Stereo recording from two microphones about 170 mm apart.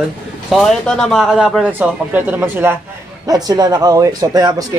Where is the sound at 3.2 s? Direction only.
20° right (ahead or behind).